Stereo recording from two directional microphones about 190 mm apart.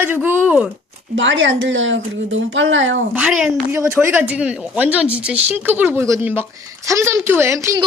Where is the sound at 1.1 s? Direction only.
80° right.